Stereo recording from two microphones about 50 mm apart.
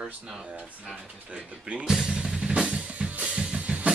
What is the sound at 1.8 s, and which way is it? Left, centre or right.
Drum kit, centre.